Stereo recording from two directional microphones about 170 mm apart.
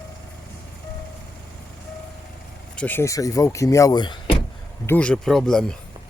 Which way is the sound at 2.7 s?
10° left (ahead or behind).